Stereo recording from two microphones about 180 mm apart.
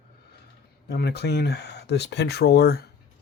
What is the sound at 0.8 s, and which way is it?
Speech, 65° left (ahead or behind).